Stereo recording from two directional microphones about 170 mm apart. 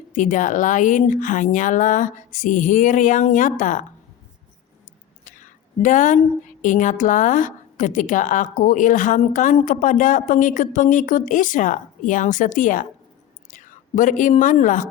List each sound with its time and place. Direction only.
0.1 s a woman's voice: 50° left (ahead or behind)
5.2 s a sound: 50° left (ahead or behind)
6.6 s a woman's voice: 50° left (ahead or behind)